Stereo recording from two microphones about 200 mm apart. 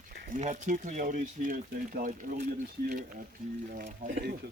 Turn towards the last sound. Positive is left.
turn(degrees=-45)  # may be behind; listen again after turning